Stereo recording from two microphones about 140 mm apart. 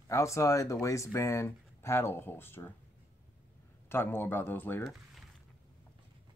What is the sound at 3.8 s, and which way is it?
Speech, 15° left (ahead or behind).